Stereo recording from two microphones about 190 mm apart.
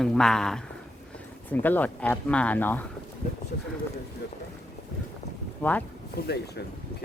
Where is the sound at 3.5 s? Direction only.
55° left (ahead or behind).